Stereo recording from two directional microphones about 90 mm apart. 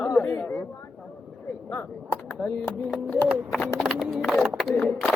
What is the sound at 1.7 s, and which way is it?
Speech, 20° left (ahead or behind).